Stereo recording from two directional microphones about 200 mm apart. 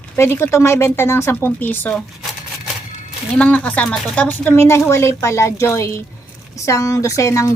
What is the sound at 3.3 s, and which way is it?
Speech, 5° left (ahead or behind).